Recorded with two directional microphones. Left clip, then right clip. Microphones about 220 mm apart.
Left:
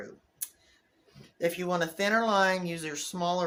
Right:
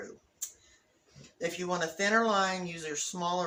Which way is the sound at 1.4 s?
50° left (ahead or behind).